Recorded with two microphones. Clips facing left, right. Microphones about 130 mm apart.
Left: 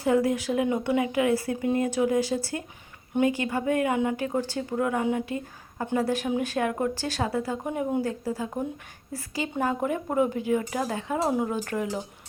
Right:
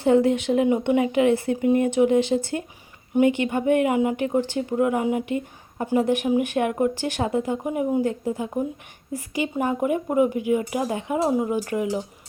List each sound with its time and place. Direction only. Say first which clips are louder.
0.0 s speech: right 5 dB; 30° right (ahead or behind)
7.6 s speech: right 4 dB; 10° right (ahead or behind)
8.0 s speech: right 4 dB; 20° right (ahead or behind)
11.2 s speech: right 4 dB; centre (ahead or behind)
11.4 s speech: right 4 dB; 10° right (ahead or behind)